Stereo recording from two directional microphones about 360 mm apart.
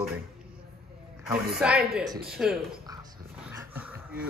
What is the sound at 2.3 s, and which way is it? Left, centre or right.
Speech, centre.